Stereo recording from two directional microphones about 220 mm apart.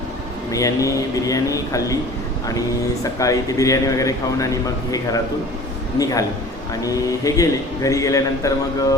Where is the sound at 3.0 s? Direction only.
15° left (ahead or behind).